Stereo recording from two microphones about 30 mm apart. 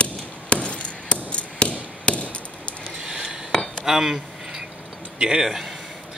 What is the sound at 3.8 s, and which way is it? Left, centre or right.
Speech, centre.